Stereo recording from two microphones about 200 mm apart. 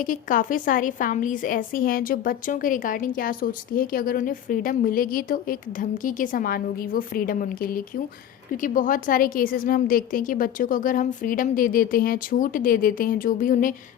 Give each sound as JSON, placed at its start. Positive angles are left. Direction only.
{"t": 0.0, "sound": "a woman's voice", "side_deg": 40}